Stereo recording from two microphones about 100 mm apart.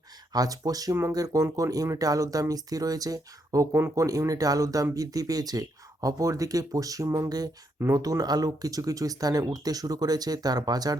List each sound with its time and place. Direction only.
0.3 s speech: 40° right (ahead or behind)
4.0 s speech: 35° right (ahead or behind)